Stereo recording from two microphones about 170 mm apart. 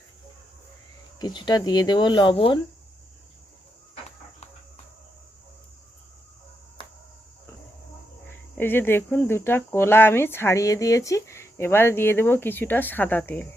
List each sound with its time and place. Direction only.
1.2 s speech: 25° left (ahead or behind)
8.5 s speech: 10° left (ahead or behind)